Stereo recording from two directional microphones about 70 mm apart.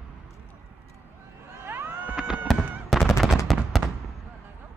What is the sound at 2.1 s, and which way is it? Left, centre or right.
Fireworks, centre.